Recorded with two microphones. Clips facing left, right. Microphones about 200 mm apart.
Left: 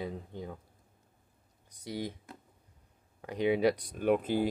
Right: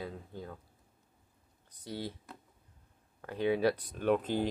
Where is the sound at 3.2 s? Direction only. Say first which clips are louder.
Left 2 dB; 15° left (ahead or behind).